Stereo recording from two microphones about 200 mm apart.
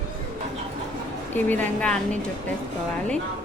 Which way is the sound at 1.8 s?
5° left (ahead or behind).